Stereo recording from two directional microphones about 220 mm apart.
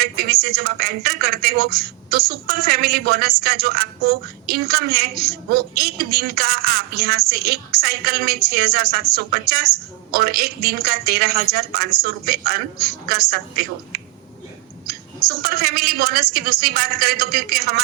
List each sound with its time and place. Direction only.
0.0 s a woman's voice: 45° right (ahead or behind)